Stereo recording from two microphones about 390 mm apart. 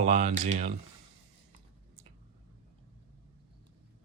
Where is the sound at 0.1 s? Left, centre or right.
Centre.